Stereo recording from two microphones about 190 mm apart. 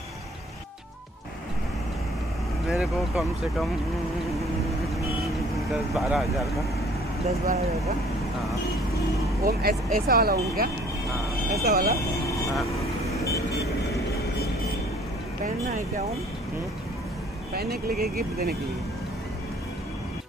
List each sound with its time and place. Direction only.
2.7 s speech: centre (ahead or behind)
5.7 s speech: centre (ahead or behind)
7.4 s speech: 35° right (ahead or behind)
9.4 s speech: 55° right (ahead or behind)
13.1 s vehicle: 15° left (ahead or behind)
17.6 s speech: 55° right (ahead or behind)